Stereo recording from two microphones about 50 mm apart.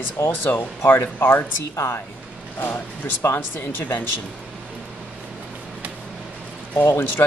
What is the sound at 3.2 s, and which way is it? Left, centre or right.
Speech, left.